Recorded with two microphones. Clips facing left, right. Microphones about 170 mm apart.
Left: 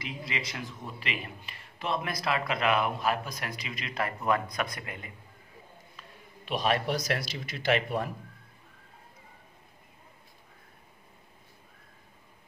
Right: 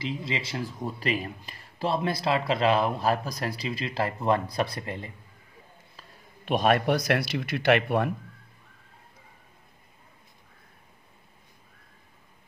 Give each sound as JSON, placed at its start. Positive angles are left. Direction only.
{"t": 0.0, "sound": "a man's voice", "side_deg": -25}
{"t": 6.4, "sound": "speech", "side_deg": -50}